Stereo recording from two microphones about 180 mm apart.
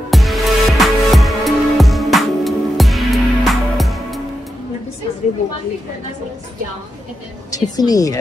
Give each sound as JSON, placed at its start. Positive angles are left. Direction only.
{"t": 0.1, "sound": "music", "side_deg": 0}
{"t": 7.5, "sound": "a woman's voice", "side_deg": 20}